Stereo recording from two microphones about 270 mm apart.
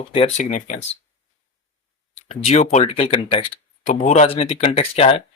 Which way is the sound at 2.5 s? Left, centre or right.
Left.